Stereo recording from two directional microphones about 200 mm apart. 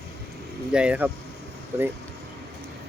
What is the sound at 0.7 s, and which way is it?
Speech, 5° right (ahead or behind).